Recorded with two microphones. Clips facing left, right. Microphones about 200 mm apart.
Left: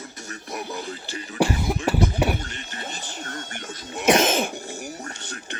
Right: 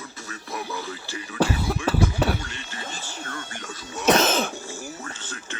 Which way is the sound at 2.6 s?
20° left (ahead or behind).